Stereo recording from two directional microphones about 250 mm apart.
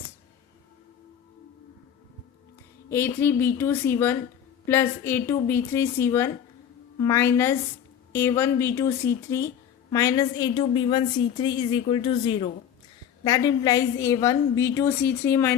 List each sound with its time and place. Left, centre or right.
2.9 s a woman's voice: centre